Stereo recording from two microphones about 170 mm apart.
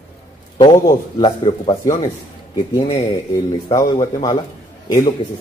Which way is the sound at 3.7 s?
25° left (ahead or behind).